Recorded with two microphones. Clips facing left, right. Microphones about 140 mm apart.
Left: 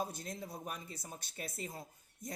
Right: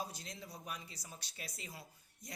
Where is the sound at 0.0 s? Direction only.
50° left (ahead or behind).